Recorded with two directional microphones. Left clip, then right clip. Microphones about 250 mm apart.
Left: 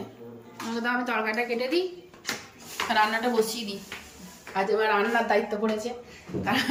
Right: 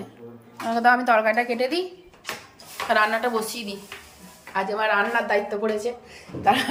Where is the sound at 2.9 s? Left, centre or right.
Centre.